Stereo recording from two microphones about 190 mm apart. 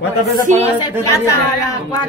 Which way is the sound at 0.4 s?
40° right (ahead or behind).